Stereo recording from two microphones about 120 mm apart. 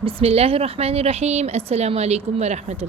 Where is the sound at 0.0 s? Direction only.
55° right (ahead or behind).